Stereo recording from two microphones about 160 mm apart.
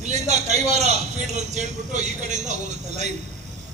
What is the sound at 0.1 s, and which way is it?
A man's voice, 45° right (ahead or behind).